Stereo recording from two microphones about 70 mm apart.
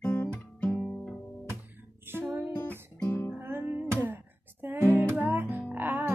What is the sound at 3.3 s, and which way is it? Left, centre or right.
Music, right.